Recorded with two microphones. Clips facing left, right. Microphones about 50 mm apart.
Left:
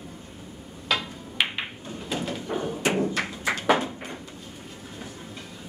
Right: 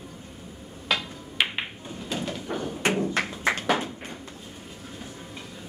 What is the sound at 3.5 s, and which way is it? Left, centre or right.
Tap, centre.